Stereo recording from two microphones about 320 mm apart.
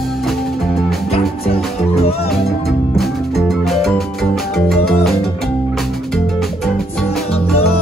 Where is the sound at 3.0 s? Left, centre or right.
Centre.